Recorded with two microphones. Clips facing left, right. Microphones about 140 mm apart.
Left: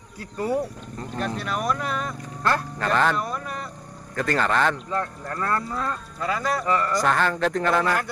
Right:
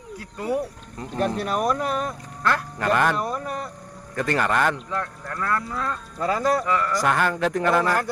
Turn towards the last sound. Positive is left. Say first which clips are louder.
# right 1 dB
turn(degrees=-10)  # may be behind; listen again after turning